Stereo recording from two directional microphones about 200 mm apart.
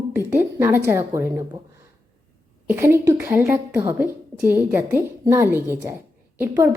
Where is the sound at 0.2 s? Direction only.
10° right (ahead or behind).